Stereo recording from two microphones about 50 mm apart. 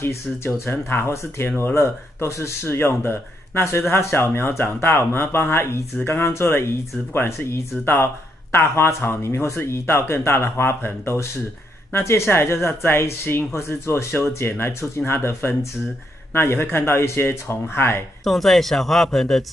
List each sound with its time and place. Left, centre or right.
0.0 s speech: left
0.7 s speech: left
1.0 s speech: left
7.9 s speech: left
11.9 s speech: left
15.4 s speech: left
18.2 s speech: centre